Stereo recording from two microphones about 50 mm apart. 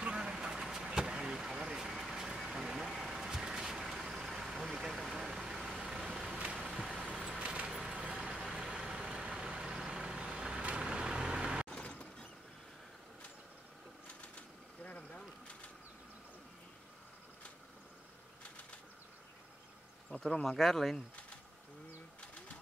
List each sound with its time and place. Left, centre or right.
0.0 s vehicle: centre
7.3 s vehicle: right
11.7 s mechanisms: left
20.1 s a sound: centre
20.4 s speech: centre